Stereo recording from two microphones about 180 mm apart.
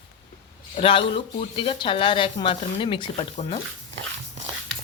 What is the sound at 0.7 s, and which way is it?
Speech, 30° left (ahead or behind).